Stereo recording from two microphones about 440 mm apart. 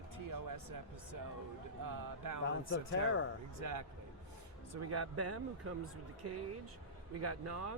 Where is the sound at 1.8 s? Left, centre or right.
Right.